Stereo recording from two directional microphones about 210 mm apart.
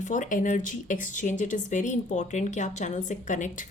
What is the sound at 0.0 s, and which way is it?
A woman's voice, 35° left (ahead or behind).